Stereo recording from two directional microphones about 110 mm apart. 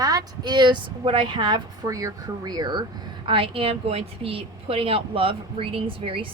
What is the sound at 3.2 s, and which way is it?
A woman's voice, 55° right (ahead or behind).